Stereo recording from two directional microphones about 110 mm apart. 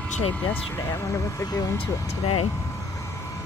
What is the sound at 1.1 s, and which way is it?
Speech, 35° left (ahead or behind).